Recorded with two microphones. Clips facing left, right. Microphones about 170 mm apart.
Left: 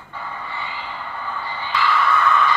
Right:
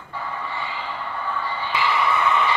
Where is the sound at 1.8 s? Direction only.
15° right (ahead or behind).